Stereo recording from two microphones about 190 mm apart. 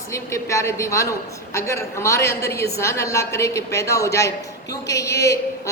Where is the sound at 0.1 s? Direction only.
15° left (ahead or behind).